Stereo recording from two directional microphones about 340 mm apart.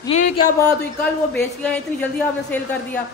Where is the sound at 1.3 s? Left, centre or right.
Centre.